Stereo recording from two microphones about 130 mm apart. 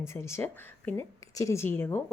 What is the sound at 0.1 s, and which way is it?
A woman's voice, 20° left (ahead or behind).